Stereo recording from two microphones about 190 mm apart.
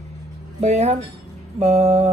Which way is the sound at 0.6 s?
35° right (ahead or behind).